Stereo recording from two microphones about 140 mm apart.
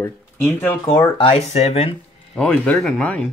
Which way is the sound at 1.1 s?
45° left (ahead or behind).